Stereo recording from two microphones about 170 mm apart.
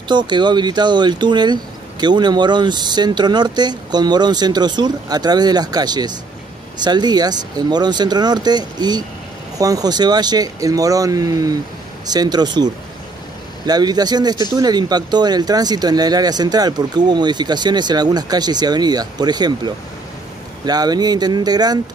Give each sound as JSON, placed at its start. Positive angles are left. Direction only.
{"t": 0.1, "sound": "speech", "side_deg": -25}